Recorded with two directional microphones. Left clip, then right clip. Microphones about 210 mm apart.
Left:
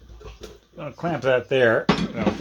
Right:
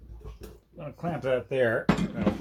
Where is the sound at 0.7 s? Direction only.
35° left (ahead or behind).